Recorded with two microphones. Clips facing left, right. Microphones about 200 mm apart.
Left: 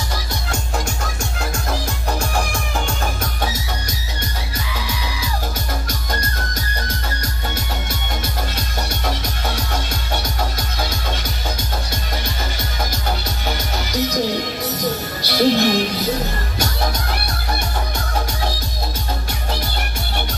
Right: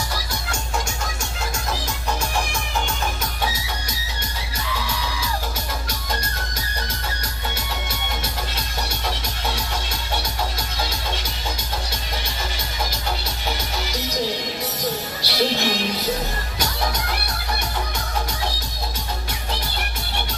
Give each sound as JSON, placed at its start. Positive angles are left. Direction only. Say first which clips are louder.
{"t": 15.2, "sound": "music", "louder": "left 7 dB", "side_deg": 50}